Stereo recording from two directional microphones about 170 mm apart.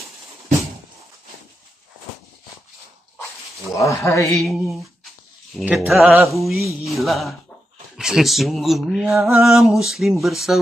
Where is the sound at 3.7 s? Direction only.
20° left (ahead or behind).